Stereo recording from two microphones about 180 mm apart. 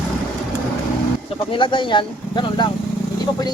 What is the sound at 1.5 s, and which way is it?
Speech, 25° left (ahead or behind).